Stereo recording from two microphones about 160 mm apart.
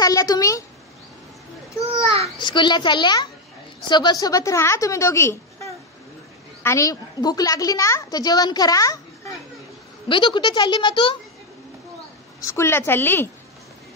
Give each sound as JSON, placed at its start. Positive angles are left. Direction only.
{"t": 0.0, "sound": "a child's voice", "side_deg": 20}
{"t": 1.8, "sound": "a sound", "side_deg": 20}
{"t": 2.3, "sound": "a child's voice", "side_deg": 30}
{"t": 12.4, "sound": "a woman's voice", "side_deg": 20}